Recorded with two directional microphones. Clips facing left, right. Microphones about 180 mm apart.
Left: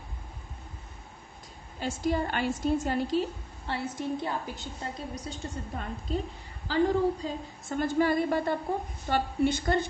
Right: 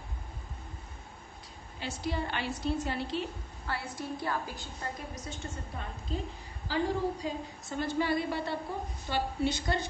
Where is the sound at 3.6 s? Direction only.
25° left (ahead or behind).